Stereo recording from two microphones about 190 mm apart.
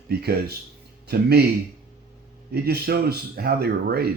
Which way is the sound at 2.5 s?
55° right (ahead or behind).